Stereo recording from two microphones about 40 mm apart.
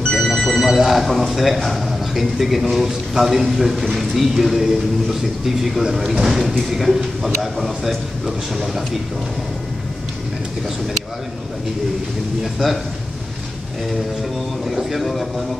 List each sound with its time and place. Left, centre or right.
0.1 s telephone bell ringing: centre
0.6 s speech: centre
14.7 s speech: centre